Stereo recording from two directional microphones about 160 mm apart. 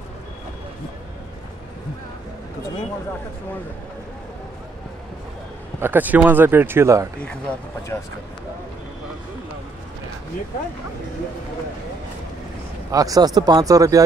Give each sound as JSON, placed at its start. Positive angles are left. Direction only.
{"t": 5.8, "sound": "speech", "side_deg": -10}
{"t": 7.2, "sound": "speech", "side_deg": 5}
{"t": 12.9, "sound": "speech", "side_deg": -20}